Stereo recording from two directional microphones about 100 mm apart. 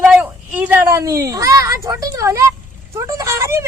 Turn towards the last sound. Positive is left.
turn(degrees=-25)  # may be behind; listen again after turning